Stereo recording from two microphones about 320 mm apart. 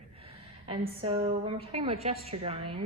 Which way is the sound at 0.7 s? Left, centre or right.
Centre.